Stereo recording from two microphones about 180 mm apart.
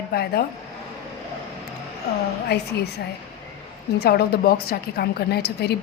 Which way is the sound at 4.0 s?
60° left (ahead or behind).